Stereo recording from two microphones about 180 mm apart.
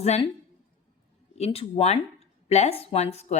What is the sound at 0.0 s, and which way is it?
Speech, 35° left (ahead or behind).